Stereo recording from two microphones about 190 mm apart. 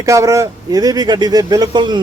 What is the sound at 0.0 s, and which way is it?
Speech, 15° right (ahead or behind).